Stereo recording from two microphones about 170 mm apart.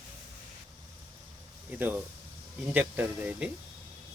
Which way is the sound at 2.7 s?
10° right (ahead or behind).